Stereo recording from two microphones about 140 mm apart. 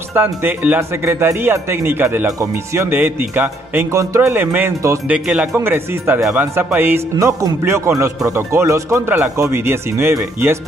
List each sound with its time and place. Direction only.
0.1 s speech: 15° right (ahead or behind)